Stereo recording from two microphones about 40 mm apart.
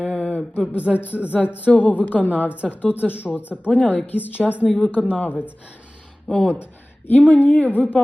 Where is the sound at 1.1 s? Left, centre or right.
Right.